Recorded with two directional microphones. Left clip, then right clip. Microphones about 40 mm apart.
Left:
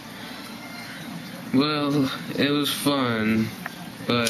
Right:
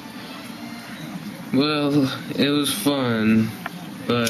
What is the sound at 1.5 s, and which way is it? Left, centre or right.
Speech, left.